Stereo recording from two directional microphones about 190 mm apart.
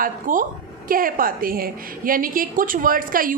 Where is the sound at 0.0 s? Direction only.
45° right (ahead or behind).